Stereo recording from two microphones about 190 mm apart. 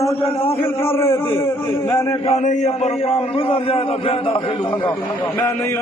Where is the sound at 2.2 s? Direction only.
40° left (ahead or behind).